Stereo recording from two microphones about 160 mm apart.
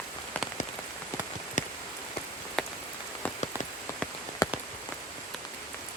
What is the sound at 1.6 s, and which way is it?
Rain on surface, 50° left (ahead or behind).